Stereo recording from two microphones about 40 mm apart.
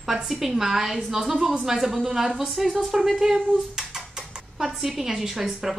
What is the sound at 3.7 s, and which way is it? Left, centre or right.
Dishes, centre.